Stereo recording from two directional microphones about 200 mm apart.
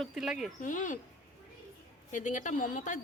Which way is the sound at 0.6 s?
40° left (ahead or behind).